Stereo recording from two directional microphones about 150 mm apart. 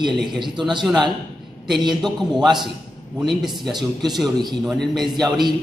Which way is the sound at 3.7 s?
25° right (ahead or behind).